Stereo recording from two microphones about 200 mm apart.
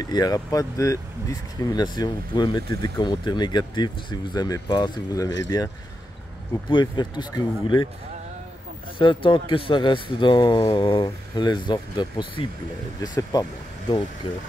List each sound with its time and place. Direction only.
0.0 s speech: 20° left (ahead or behind)
6.7 s speech: 20° left (ahead or behind)
8.9 s speech: 25° left (ahead or behind)